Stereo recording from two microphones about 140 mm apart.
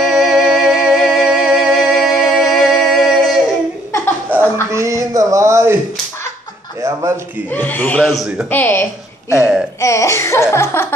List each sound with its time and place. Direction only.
0.0 s music: centre (ahead or behind)
4.6 s a sound: 20° right (ahead or behind)
6.8 s a sound: 25° right (ahead or behind)
7.4 s speech: 15° left (ahead or behind); by 8.5 s 5° right (ahead or behind)
8.5 s speech: 15° left (ahead or behind)
9.3 s speech: 5° right (ahead or behind)
9.8 s laughter: 20° left (ahead or behind)